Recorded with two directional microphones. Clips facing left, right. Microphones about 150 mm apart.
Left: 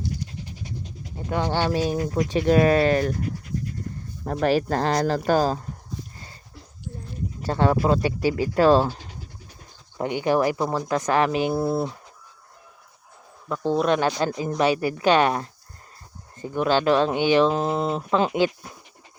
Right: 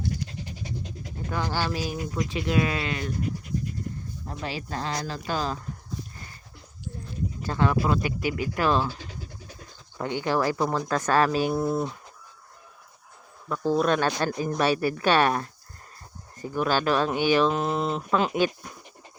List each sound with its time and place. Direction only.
0.0 s pant: 90° right
1.3 s speech: 25° left (ahead or behind); by 3.2 s 40° left (ahead or behind)
4.2 s speech: 60° left (ahead or behind); by 5.5 s 45° left (ahead or behind)
7.4 s speech: 30° left (ahead or behind)
10.0 s speech: 20° left (ahead or behind)
13.7 s speech: 20° left (ahead or behind)